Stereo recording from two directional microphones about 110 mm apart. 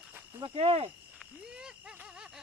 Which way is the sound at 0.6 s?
60° right (ahead or behind).